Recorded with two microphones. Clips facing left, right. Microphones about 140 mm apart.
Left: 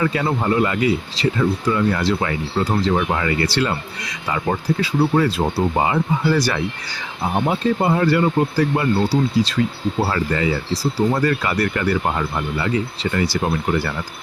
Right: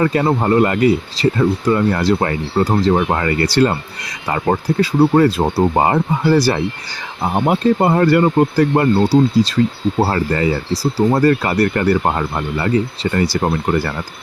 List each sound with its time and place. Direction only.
0.0 s speech: 40° right (ahead or behind)
6.3 s speech: 35° right (ahead or behind)
7.4 s speech: 55° right (ahead or behind)
11.1 s speech: 40° right (ahead or behind)